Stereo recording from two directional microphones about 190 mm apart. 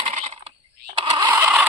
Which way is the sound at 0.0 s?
35° right (ahead or behind).